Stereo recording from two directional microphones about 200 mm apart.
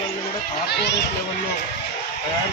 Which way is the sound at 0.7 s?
55° left (ahead or behind).